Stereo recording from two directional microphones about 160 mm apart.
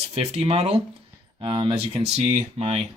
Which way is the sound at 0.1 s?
40° right (ahead or behind).